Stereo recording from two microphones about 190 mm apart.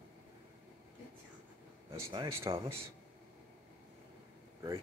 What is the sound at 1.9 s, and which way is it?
Speech, 25° right (ahead or behind).